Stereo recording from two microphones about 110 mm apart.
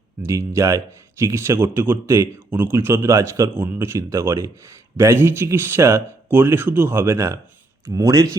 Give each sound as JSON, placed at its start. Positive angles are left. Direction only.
{"t": 0.2, "sound": "speech", "side_deg": -25}